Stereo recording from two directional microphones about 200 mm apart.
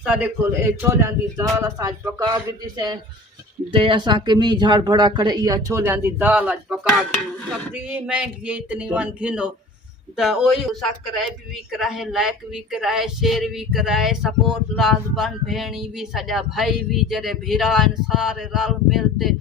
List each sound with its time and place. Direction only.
0.0 s a man's voice: 5° right (ahead or behind)